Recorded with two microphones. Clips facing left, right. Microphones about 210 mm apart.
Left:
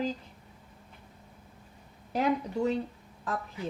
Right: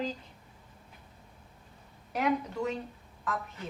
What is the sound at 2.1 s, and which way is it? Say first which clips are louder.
Speech: left 2 dB; 30° left (ahead or behind).